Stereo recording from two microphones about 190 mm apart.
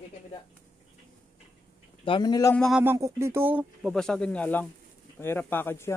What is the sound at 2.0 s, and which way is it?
Speech, 25° left (ahead or behind).